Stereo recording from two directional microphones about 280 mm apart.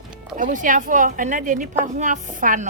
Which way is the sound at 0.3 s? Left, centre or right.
Right.